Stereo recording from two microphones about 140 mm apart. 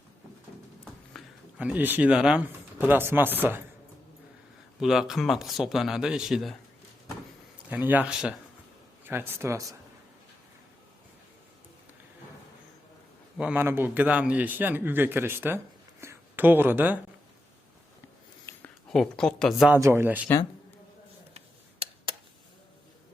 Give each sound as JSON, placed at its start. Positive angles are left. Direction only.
{"t": 1.2, "sound": "a sound", "side_deg": 0}
{"t": 1.5, "sound": "speech", "side_deg": -10}
{"t": 4.8, "sound": "speech", "side_deg": -5}
{"t": 7.7, "sound": "speech", "side_deg": -10}
{"t": 13.3, "sound": "speech", "side_deg": -10}
{"t": 18.5, "sound": "a sound", "side_deg": 20}
{"t": 18.9, "sound": "speech", "side_deg": 5}
{"t": 19.7, "sound": "speech", "side_deg": -20}
{"t": 21.3, "sound": "a sound", "side_deg": -45}